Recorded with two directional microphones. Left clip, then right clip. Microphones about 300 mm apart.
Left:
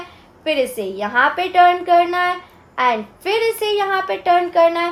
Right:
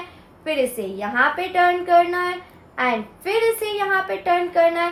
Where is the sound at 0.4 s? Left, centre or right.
Left.